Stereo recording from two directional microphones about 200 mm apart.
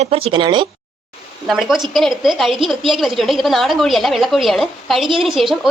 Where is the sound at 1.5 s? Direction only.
Centre (ahead or behind).